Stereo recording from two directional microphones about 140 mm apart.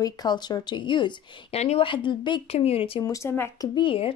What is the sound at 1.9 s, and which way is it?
A woman's voice, 35° left (ahead or behind).